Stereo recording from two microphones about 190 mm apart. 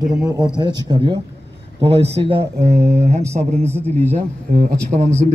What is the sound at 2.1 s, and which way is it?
Speech, 30° right (ahead or behind).